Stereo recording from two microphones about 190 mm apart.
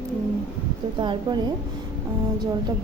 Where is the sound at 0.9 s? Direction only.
25° right (ahead or behind).